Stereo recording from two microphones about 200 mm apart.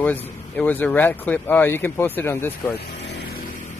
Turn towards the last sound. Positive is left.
turn(degrees=55)  # may be behind; listen again after turning